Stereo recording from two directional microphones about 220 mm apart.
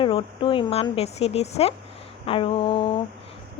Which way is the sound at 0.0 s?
25° left (ahead or behind).